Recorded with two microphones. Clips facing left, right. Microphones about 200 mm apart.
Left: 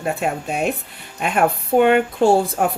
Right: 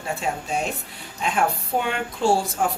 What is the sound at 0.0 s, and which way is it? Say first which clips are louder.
Speech: left 5 dB; 60° left (ahead or behind).